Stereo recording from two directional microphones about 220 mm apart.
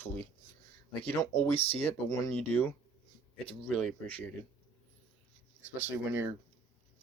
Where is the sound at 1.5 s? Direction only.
25° left (ahead or behind).